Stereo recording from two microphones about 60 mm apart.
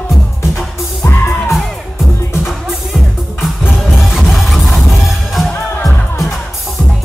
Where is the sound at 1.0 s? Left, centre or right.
Left.